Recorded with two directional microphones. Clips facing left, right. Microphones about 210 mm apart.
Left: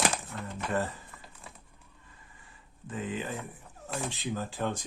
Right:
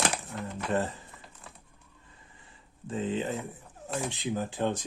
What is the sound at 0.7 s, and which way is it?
Speech, 25° right (ahead or behind).